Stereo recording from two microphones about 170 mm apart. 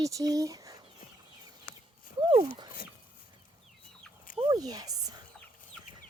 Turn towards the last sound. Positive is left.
turn(degrees=-20)  # may be behind; listen again after turning